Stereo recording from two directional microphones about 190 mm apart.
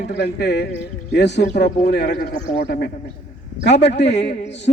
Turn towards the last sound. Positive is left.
turn(degrees=65)  # may be behind; listen again after turning